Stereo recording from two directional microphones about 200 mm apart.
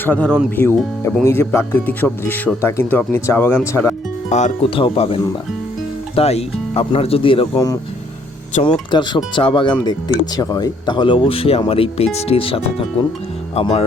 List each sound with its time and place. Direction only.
0.0 s speech: 5° left (ahead or behind)
4.3 s speech: 35° left (ahead or behind); by 7.8 s 15° left (ahead or behind)
8.5 s speech: 35° left (ahead or behind)
8.9 s speech: 25° left (ahead or behind)